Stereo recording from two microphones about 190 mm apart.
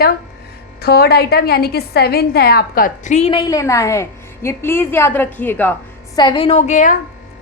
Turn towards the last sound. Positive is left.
turn(degrees=40)  # may be behind; listen again after turning